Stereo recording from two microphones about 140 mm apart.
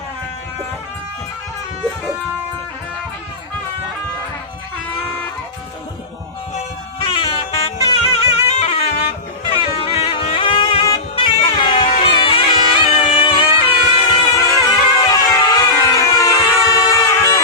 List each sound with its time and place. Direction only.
7.0 s music: 35° left (ahead or behind)
14.3 s music: 30° left (ahead or behind)